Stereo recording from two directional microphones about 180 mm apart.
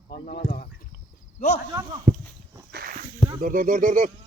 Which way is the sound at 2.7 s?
55° right (ahead or behind).